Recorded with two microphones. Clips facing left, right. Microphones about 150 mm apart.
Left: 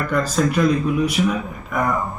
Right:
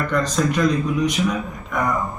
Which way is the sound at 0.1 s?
10° left (ahead or behind).